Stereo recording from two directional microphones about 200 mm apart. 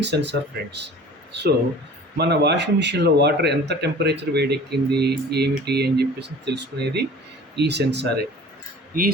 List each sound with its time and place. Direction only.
0.0 s speech: 60° right (ahead or behind)
2.1 s speech: 55° right (ahead or behind)
8.9 s speech: 45° right (ahead or behind)